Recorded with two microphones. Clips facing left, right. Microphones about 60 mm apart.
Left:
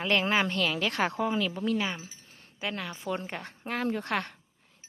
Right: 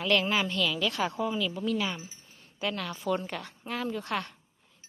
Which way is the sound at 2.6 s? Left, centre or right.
Centre.